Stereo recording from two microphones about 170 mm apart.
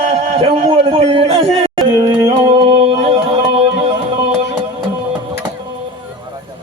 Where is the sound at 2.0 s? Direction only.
30° right (ahead or behind).